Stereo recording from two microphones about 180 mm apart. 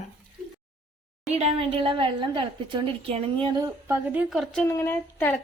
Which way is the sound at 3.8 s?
15° right (ahead or behind).